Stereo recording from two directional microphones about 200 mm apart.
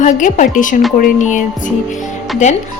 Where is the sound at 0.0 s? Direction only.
40° left (ahead or behind).